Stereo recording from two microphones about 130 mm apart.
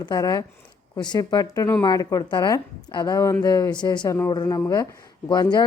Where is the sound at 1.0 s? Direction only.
30° left (ahead or behind).